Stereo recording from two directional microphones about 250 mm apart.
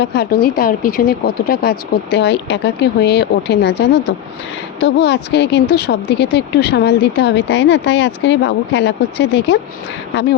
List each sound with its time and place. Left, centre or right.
0.0 s speech: left